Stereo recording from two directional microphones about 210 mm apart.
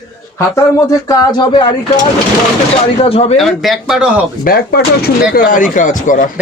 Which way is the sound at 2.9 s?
30° left (ahead or behind).